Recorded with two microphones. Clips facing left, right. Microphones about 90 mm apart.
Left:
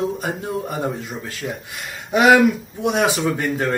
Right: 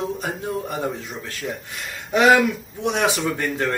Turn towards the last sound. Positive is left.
turn(degrees=5)  # may be behind; listen again after turning